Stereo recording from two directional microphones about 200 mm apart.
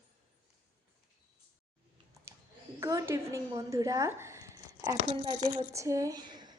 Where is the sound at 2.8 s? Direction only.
15° right (ahead or behind).